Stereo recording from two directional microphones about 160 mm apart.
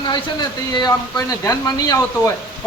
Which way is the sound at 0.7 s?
25° left (ahead or behind).